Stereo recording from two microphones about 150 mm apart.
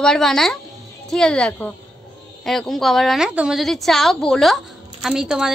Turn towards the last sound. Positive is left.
turn(degrees=-5)  # may be behind; listen again after turning